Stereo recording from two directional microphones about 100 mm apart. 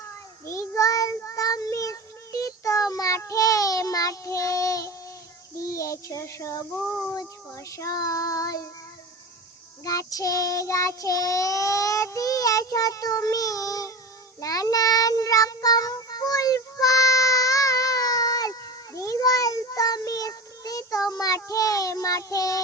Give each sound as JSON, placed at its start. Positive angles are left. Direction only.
{"t": 0.4, "sound": "child singing", "side_deg": 30}
{"t": 9.8, "sound": "child singing", "side_deg": 35}
{"t": 14.4, "sound": "meow", "side_deg": 35}